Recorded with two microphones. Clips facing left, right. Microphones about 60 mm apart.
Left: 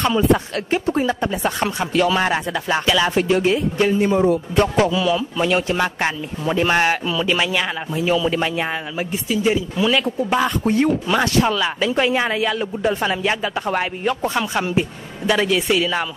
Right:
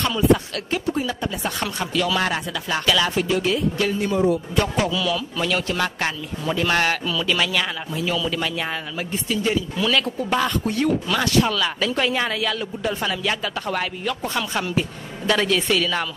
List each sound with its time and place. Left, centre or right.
0.7 s speech: left
3.2 s speech: left
9.1 s speech: centre
10.6 s speech: left
15.2 s speech: centre